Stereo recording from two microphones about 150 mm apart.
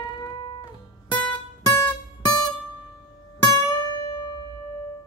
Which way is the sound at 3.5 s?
30° left (ahead or behind).